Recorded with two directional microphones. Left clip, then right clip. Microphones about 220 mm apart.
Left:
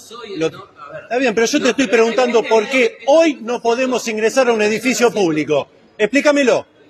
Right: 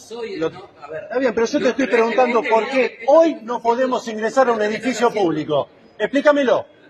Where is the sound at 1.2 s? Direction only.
50° left (ahead or behind).